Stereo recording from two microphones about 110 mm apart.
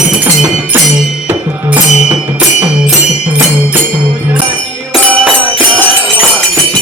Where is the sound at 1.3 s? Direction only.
15° right (ahead or behind).